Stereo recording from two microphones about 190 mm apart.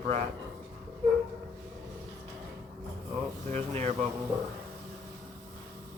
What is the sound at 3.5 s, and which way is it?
Mantra, 40° right (ahead or behind).